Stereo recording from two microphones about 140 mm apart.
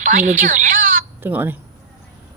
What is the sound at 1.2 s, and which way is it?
Speech, 15° right (ahead or behind).